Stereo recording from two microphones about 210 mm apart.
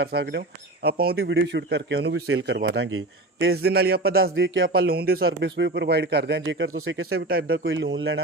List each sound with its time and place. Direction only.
0.0 s speech: 50° right (ahead or behind)
2.7 s a man's voice: 75° right (ahead or behind)
3.4 s speech: 50° right (ahead or behind)
4.4 s speech: 60° right (ahead or behind)
7.3 s speech: 45° right (ahead or behind)
7.6 s speech: 60° right (ahead or behind)